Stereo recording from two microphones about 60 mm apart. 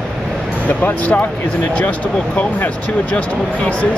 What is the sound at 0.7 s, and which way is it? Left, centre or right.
Speech, left.